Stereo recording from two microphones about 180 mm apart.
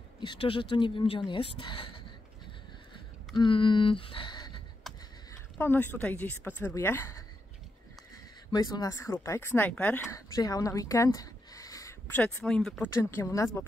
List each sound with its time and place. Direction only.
0.2 s speech: 30° left (ahead or behind)
3.3 s speech: 25° left (ahead or behind)
4.9 s a sound: centre (ahead or behind)
5.6 s speech: 10° left (ahead or behind)
8.5 s speech: 20° left (ahead or behind)
10.1 s a sound: 20° left (ahead or behind)
12.2 s speech: 5° left (ahead or behind)
12.9 s speech: 15° left (ahead or behind)